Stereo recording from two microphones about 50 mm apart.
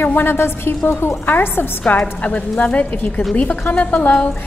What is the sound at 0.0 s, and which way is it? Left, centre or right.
A woman's voice, left.